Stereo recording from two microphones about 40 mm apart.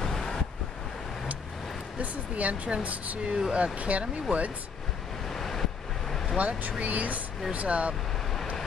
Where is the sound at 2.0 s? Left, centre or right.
Right.